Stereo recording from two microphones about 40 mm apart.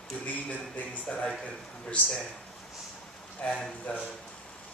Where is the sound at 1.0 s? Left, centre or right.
Left.